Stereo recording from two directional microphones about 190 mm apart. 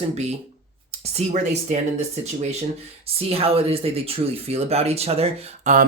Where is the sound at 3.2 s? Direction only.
30° right (ahead or behind).